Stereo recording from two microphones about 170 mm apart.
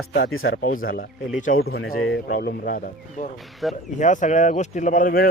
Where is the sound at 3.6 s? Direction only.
Centre (ahead or behind).